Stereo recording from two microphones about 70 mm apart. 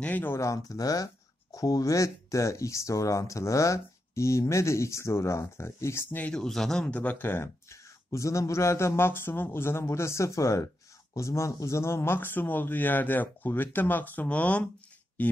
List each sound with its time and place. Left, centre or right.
0.0 s speech: left
0.3 s speech: left
6.3 s speech: centre
6.9 s speech: left